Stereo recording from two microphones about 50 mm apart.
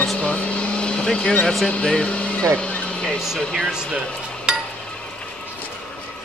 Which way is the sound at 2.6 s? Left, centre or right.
Left.